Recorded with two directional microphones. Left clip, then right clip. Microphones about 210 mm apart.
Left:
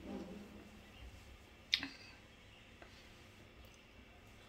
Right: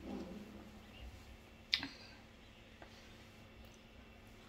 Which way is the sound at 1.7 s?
10° right (ahead or behind).